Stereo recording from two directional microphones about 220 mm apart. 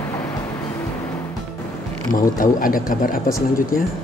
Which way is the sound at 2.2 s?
40° left (ahead or behind).